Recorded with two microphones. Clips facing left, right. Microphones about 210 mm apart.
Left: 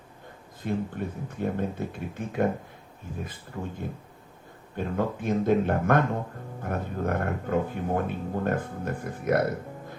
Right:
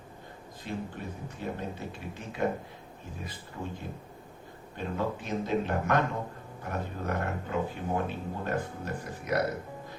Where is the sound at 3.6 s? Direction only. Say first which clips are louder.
Left 3 dB; 90° left.